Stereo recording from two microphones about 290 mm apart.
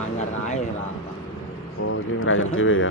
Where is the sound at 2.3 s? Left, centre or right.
Left.